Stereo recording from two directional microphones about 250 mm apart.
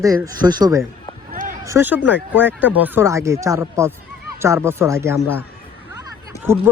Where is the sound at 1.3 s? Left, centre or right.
Right.